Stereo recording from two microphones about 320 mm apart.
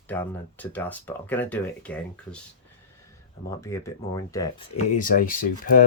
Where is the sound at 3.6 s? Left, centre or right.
Centre.